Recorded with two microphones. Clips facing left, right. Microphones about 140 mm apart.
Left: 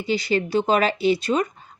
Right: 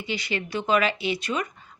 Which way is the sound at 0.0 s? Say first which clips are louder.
Left 8 dB; 35° left (ahead or behind).